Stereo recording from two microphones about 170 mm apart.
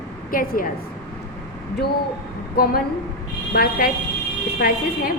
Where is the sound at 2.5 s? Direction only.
60° left (ahead or behind).